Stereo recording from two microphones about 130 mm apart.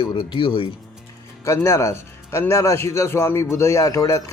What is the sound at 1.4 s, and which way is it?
A man's voice, 20° left (ahead or behind).